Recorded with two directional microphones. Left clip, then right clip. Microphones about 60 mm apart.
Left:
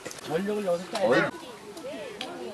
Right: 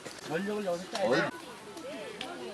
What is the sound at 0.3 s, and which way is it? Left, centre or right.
Speech, centre.